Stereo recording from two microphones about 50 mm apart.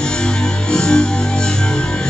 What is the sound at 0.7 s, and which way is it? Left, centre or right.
Music, centre.